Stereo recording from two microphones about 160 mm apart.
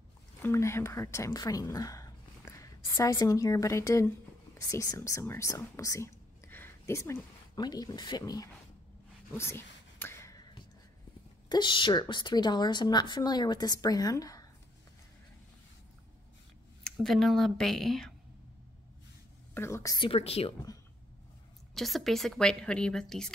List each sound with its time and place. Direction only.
0.4 s a woman's voice: 15° left (ahead or behind)
9.4 s whispering: 15° left (ahead or behind)
11.4 s a woman's voice: 30° left (ahead or behind)
16.8 s a woman's voice: centre (ahead or behind)
19.5 s a woman's voice: 15° left (ahead or behind)
20.1 s a woman's voice: 40° left (ahead or behind)
21.7 s a woman's voice: centre (ahead or behind)